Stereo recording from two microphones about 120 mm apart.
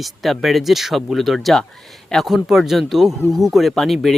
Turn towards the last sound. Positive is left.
turn(degrees=0)  # may be behind; listen again after turning